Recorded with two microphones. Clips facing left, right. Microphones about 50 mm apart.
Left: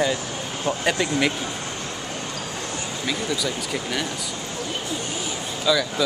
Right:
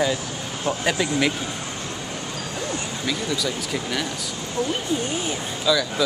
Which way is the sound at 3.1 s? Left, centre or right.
Centre.